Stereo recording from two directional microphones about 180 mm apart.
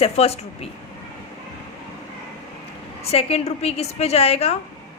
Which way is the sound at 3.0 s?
35° left (ahead or behind).